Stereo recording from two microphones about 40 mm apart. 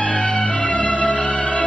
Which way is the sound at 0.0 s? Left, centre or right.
Left.